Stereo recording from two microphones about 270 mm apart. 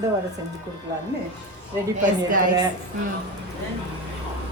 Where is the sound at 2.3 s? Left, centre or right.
Right.